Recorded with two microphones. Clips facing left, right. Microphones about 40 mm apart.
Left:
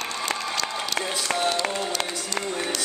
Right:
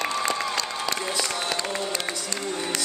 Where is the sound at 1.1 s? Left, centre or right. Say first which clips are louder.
Left 3 dB; left.